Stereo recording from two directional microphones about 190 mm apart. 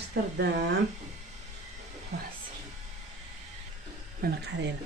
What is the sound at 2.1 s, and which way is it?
Speech, 60° right (ahead or behind).